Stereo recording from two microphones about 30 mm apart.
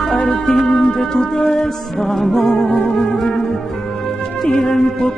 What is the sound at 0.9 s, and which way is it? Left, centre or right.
Music, centre.